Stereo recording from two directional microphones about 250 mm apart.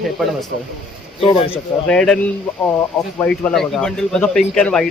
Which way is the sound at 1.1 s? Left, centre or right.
Left.